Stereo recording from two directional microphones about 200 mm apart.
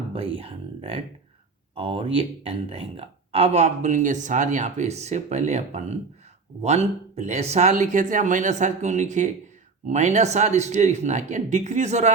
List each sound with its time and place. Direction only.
0.1 s speech: 30° right (ahead or behind)